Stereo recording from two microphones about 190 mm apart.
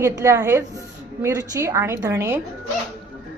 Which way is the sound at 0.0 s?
15° right (ahead or behind).